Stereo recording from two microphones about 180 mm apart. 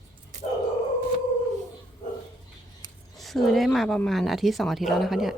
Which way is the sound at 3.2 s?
Centre (ahead or behind).